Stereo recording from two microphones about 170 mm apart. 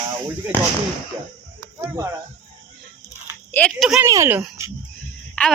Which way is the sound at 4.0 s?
15° right (ahead or behind).